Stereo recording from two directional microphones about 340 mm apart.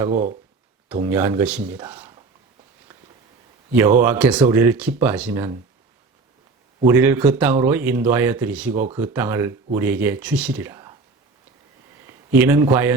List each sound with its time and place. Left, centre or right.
0.1 s speech: right
0.9 s speech: centre
4.0 s speech: centre
6.8 s speech: centre
12.0 s a man's voice: centre